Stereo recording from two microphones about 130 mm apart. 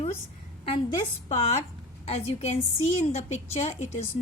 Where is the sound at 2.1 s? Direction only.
55° left (ahead or behind).